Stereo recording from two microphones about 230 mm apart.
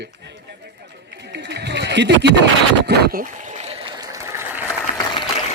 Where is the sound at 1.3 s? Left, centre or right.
Right; by 4.4 s centre.